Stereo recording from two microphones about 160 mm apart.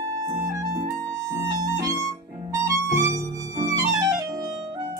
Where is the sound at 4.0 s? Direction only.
20° right (ahead or behind).